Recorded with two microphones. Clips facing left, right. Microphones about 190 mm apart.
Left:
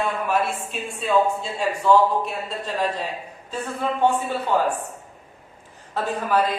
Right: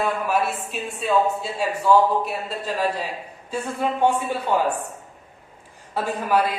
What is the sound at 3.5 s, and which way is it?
A woman's voice, 10° right (ahead or behind).